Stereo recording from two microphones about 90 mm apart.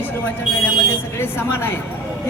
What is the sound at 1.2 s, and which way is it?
Speech, 25° left (ahead or behind).